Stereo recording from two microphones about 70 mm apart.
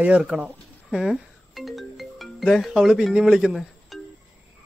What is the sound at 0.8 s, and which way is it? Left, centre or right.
Speech, centre.